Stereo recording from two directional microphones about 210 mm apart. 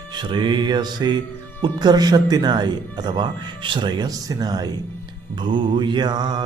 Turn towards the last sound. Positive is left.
turn(degrees=-20)  # may be behind; listen again after turning